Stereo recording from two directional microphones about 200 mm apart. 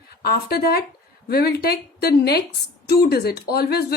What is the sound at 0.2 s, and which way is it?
Speech, 50° left (ahead or behind).